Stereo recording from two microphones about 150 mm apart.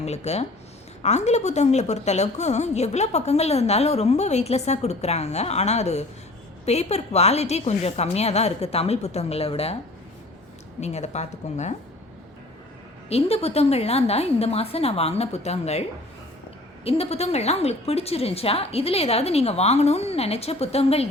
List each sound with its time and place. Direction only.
0.0 s a woman's voice: 45° left (ahead or behind)
10.8 s a woman's voice: 50° left (ahead or behind)
13.1 s a woman's voice: 40° left (ahead or behind)
16.8 s a woman's voice: 40° left (ahead or behind)